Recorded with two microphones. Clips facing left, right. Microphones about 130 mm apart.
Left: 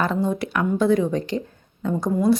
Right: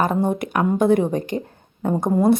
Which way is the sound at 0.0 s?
50° right (ahead or behind).